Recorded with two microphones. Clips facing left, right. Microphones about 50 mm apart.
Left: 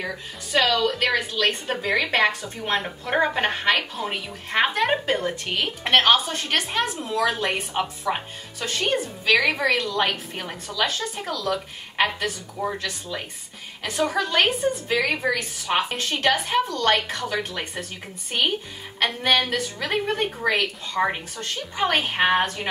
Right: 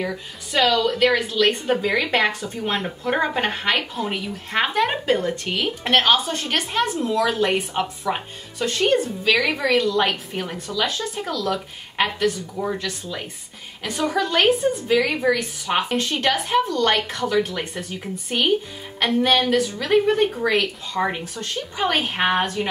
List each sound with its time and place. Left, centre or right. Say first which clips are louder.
0.0 s a woman's voice: right 3 dB; centre